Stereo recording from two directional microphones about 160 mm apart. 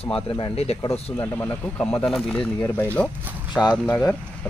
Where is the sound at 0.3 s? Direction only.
35° left (ahead or behind).